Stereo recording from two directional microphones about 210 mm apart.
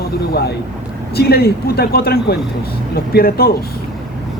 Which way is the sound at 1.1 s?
50° left (ahead or behind).